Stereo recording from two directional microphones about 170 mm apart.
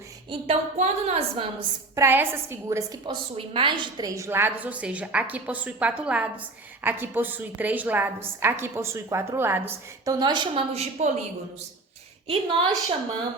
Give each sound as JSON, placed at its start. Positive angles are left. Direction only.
{"t": 0.3, "sound": "a woman's voice", "side_deg": -35}
{"t": 2.0, "sound": "a woman's voice", "side_deg": -15}
{"t": 3.3, "sound": "a woman's voice", "side_deg": -30}
{"t": 10.2, "sound": "a woman's voice", "side_deg": -25}
{"t": 12.3, "sound": "a woman's voice", "side_deg": -30}